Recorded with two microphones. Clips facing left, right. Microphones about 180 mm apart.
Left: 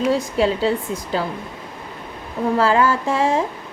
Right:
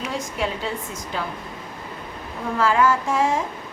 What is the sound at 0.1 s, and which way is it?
Music, 35° left (ahead or behind).